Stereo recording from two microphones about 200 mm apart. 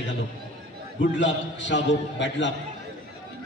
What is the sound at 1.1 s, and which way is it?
A man's voice, 65° left (ahead or behind).